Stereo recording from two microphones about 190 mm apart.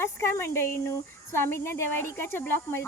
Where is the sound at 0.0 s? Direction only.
15° left (ahead or behind).